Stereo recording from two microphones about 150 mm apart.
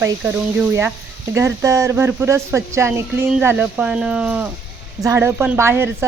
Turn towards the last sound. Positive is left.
turn(degrees=-15)  # may be behind; listen again after turning